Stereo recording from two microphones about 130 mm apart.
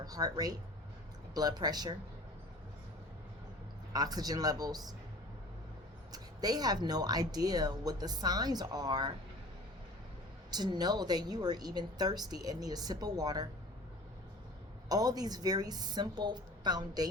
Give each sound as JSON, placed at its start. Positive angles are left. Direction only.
{"t": 0.0, "sound": "speech", "side_deg": -30}
{"t": 3.9, "sound": "speech", "side_deg": -30}
{"t": 6.1, "sound": "speech", "side_deg": -30}
{"t": 10.5, "sound": "speech", "side_deg": -30}
{"t": 14.8, "sound": "speech", "side_deg": -30}